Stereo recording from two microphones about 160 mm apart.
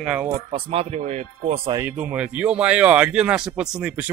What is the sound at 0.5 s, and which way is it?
Speech, 40° right (ahead or behind).